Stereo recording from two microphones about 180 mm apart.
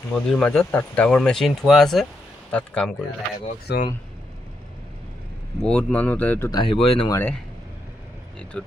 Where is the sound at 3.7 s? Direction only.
65° left (ahead or behind).